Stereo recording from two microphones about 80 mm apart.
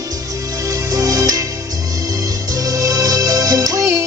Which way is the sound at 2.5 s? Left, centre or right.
Right.